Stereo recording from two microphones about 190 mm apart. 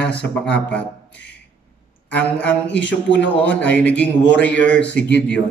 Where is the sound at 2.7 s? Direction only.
75° left (ahead or behind).